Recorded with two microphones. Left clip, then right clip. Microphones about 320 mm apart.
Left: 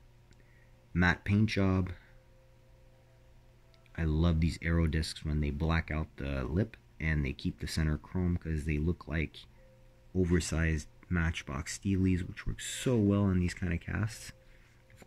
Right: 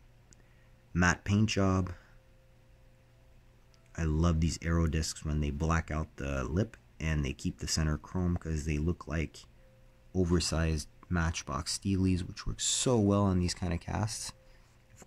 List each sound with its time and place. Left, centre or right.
0.9 s speech: centre
3.9 s speech: centre